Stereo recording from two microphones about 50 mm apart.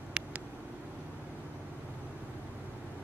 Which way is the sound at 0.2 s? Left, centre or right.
Right.